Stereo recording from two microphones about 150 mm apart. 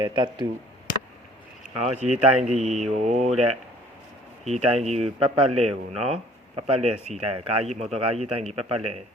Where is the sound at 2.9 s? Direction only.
50° right (ahead or behind).